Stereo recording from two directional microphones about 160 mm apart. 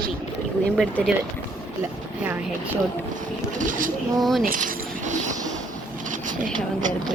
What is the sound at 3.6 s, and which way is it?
Speech, 55° right (ahead or behind).